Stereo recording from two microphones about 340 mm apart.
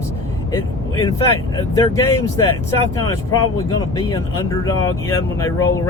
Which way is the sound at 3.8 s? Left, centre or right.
Centre.